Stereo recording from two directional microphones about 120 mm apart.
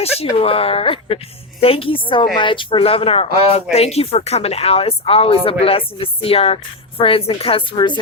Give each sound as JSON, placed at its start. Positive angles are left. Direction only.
{"t": 0.0, "sound": "a woman's voice", "side_deg": 55}